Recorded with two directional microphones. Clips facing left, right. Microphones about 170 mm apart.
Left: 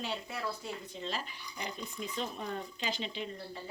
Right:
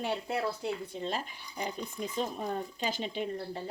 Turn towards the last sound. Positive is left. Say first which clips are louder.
# right 6 dB
turn(degrees=-50)  # may be behind; listen again after turning